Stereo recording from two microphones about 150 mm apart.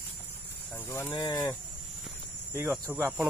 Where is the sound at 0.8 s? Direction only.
15° left (ahead or behind).